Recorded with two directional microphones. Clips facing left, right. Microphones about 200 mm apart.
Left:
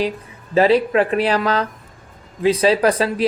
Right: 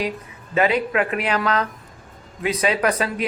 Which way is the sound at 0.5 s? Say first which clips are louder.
Left 5 dB; 30° left (ahead or behind).